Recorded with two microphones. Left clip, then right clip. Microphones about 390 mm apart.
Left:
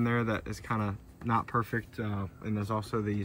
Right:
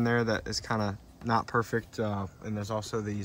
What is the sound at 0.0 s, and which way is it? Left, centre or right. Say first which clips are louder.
Speech: right 3 dB; centre.